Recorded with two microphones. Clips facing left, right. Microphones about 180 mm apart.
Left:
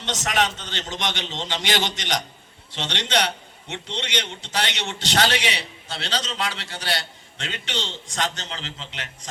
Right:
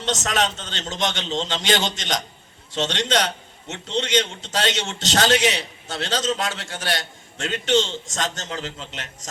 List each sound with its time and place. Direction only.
0.1 s a man's voice: 45° right (ahead or behind)